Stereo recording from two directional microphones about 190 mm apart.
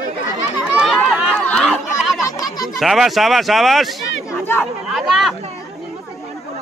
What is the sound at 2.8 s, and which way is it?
Speech, centre (ahead or behind).